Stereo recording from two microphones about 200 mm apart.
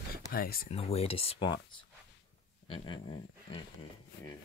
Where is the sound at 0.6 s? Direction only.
30° left (ahead or behind).